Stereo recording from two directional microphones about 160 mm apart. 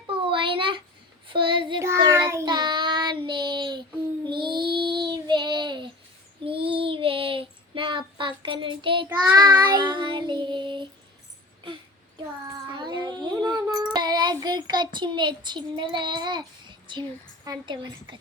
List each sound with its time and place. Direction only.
0.3 s a sound: 30° right (ahead or behind)
1.3 s child singing: 30° right (ahead or behind)
1.8 s child singing: 15° right (ahead or behind)
2.5 s child singing: 30° right (ahead or behind)
12.5 s child singing: 25° right (ahead or behind)
17.4 s a woman's voice: 25° right (ahead or behind)